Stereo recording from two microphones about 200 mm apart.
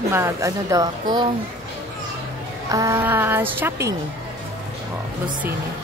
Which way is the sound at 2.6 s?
15° right (ahead or behind).